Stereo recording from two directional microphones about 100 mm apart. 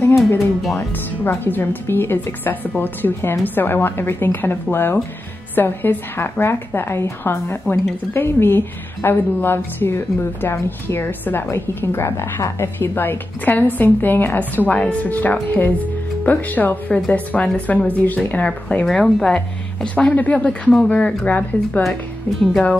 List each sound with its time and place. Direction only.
0.7 s a woman's voice: 20° left (ahead or behind)
7.6 s speech: 5° left (ahead or behind)
8.1 s a woman's voice: 20° left (ahead or behind); by 22.8 s 5° left (ahead or behind)